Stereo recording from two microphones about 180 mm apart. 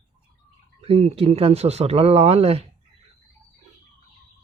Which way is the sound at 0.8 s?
35° right (ahead or behind).